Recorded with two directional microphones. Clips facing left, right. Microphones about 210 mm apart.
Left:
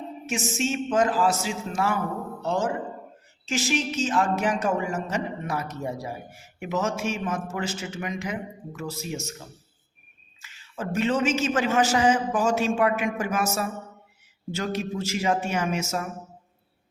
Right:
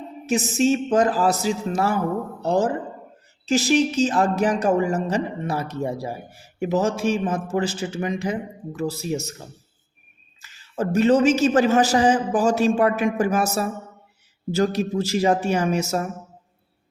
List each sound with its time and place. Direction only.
0.3 s speech: 35° right (ahead or behind)
10.4 s speech: 40° right (ahead or behind)